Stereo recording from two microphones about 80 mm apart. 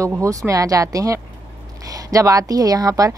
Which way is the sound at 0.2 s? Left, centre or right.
Right.